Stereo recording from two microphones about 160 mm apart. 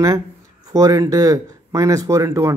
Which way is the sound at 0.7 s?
20° right (ahead or behind).